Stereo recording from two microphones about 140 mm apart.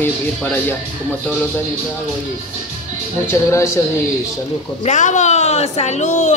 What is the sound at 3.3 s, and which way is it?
Speech, 20° left (ahead or behind).